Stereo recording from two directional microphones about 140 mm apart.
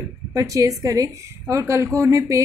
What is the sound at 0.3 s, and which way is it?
A woman's voice, 25° right (ahead or behind).